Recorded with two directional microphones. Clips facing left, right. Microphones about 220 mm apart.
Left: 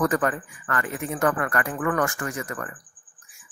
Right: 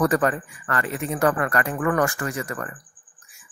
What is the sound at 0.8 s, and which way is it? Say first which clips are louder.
Speech: right 2 dB; 90° right.